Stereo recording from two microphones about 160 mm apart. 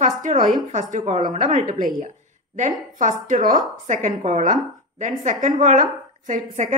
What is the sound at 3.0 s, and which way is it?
A woman's voice, 55° right (ahead or behind).